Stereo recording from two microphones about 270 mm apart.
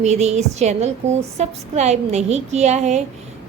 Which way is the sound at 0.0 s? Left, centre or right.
Right.